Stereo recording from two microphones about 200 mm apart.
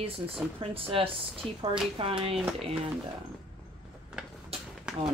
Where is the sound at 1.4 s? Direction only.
5° left (ahead or behind).